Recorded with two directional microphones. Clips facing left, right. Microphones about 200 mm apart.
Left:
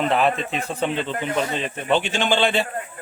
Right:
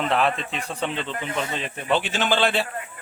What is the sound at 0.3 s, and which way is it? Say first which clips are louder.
Speech: left 5 dB; 45° left (ahead or behind).